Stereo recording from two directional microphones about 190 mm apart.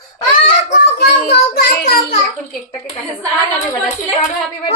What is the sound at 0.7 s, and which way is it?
Child singing, 65° left (ahead or behind).